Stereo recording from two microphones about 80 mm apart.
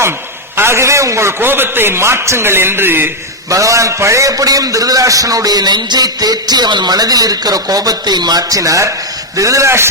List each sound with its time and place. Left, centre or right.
0.5 s a man's voice: right
1.4 s a man's voice: right
3.5 s a man's voice: right